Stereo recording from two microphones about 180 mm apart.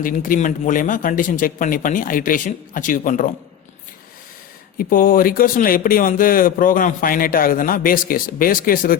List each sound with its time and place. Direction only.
0.0 s speech: 50° left (ahead or behind)
4.8 s speech: 50° left (ahead or behind)